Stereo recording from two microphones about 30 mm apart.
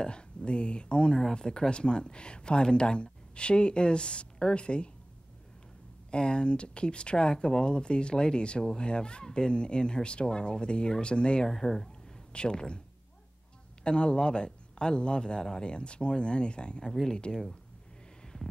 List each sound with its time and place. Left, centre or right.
0.0 s speech: left
6.0 s speech: left
11.5 s speech: centre
12.3 s speech: left
13.8 s speech: left